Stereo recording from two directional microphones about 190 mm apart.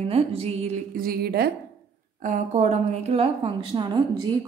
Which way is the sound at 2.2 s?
40° right (ahead or behind).